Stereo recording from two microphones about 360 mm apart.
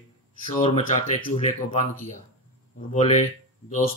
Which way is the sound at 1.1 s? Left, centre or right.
Centre.